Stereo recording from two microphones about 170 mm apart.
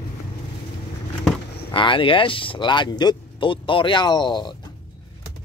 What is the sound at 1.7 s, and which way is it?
Speech, 30° left (ahead or behind).